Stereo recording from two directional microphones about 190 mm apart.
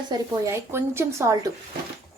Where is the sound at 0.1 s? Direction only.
15° right (ahead or behind).